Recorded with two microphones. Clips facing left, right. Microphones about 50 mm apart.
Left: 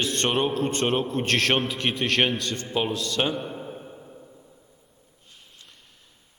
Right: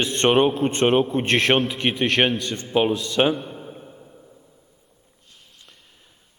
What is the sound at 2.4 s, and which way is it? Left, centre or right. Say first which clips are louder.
Speech: right 6 dB; centre.